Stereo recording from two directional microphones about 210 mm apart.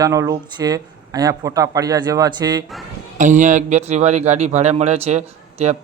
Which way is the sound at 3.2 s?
35° right (ahead or behind).